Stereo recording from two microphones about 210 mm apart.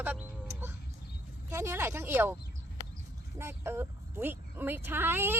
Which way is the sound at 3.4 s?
10° right (ahead or behind).